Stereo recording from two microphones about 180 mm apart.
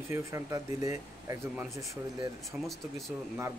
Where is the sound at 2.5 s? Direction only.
10° right (ahead or behind).